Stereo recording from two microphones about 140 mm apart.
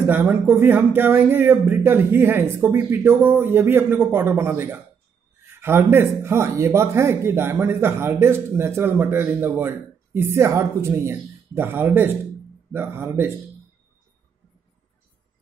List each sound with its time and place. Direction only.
0.0 s speech: 15° right (ahead or behind)